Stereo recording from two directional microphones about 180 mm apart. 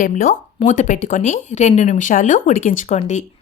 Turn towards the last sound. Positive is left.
turn(degrees=40)  # may be behind; listen again after turning